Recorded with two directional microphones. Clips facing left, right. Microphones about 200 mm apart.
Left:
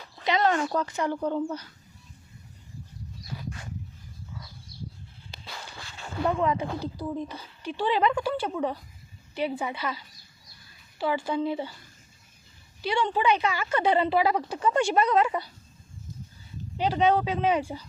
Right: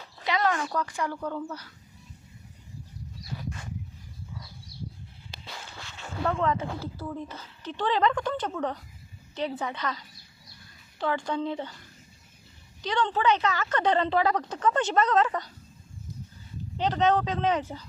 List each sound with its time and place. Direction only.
0.3 s speech: 25° left (ahead or behind)
6.2 s speech: 15° left (ahead or behind)
12.8 s speech: 10° left (ahead or behind)
16.7 s speech: 10° left (ahead or behind)